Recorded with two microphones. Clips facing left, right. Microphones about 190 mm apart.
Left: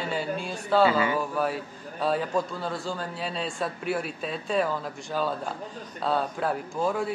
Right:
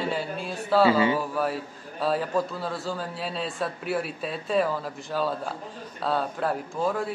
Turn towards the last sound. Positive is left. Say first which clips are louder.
# even
turn(degrees=0)  # may be behind; listen again after turning